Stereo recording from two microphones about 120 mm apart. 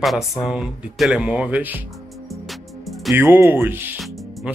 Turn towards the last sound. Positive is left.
turn(degrees=0)  # may be behind; listen again after turning